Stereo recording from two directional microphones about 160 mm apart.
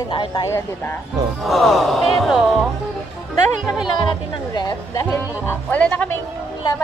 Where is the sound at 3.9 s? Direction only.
30° left (ahead or behind).